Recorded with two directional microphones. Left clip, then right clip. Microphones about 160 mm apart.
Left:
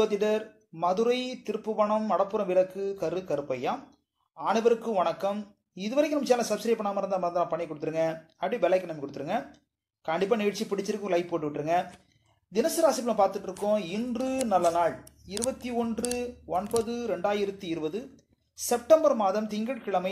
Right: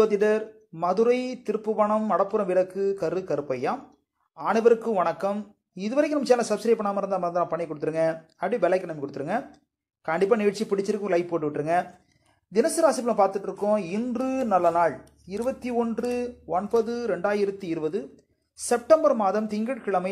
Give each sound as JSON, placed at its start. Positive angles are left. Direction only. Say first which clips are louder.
{"t": 0.0, "sound": "speech", "louder": "right 5 dB", "side_deg": -30}